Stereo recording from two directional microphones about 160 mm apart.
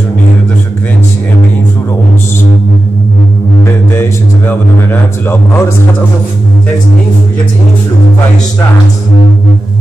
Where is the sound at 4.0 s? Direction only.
15° left (ahead or behind).